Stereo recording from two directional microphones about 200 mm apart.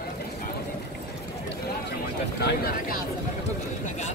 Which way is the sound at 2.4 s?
50° left (ahead or behind).